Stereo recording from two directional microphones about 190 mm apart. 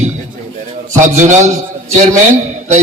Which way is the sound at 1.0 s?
40° right (ahead or behind).